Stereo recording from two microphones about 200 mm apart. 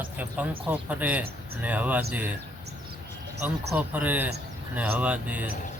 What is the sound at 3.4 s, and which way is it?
Speech, 10° right (ahead or behind).